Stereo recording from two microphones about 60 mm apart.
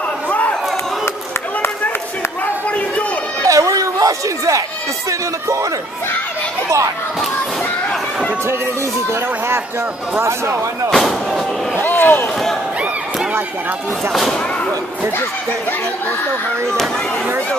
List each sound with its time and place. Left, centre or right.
0.3 s chatter: left
3.4 s chatter: right
10.2 s speech: right
10.9 s speech: centre
11.7 s a sound: left